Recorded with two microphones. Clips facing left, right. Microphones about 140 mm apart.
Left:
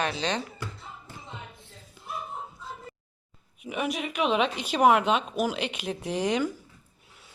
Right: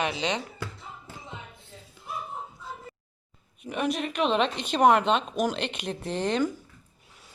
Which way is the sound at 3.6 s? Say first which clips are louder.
Right 2 dB; 10° left (ahead or behind).